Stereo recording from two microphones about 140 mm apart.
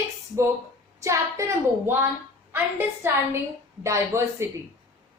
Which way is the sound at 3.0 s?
15° right (ahead or behind).